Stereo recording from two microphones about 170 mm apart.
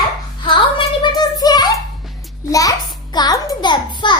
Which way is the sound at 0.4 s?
30° left (ahead or behind).